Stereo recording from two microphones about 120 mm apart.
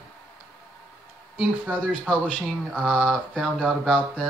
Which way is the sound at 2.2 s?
10° right (ahead or behind).